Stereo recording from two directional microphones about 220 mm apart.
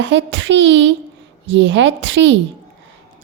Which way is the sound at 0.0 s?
55° right (ahead or behind).